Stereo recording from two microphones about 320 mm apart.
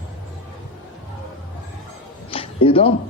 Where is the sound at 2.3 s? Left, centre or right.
Centre.